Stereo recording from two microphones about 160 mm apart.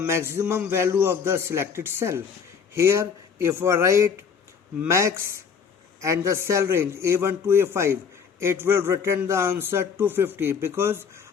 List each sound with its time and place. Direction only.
0.0 s a man's voice: 15° right (ahead or behind)